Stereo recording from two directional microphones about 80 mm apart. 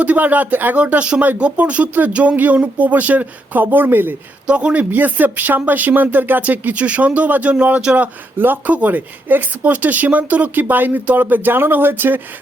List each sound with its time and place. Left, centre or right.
0.0 s speech: centre
4.4 s speech: centre